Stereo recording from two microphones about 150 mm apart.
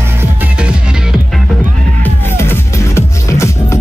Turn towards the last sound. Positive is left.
turn(degrees=15)  # may be behind; listen again after turning